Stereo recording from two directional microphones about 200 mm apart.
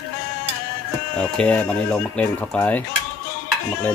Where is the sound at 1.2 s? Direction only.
5° left (ahead or behind).